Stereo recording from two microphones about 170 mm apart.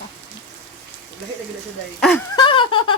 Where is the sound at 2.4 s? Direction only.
30° left (ahead or behind).